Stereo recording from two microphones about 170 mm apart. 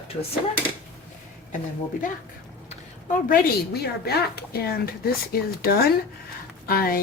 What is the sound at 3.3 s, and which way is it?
Speech, 70° left (ahead or behind).